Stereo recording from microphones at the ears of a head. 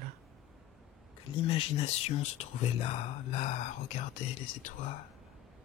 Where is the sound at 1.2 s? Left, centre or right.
Left.